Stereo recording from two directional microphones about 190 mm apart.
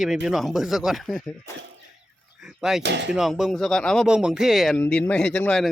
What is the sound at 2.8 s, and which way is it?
Speech, 65° right (ahead or behind).